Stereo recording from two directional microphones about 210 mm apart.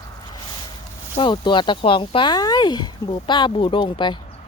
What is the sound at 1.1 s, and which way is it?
Speech, 20° left (ahead or behind).